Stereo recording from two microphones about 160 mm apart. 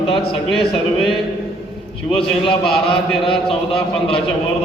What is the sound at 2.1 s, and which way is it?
A man's voice, 35° left (ahead or behind).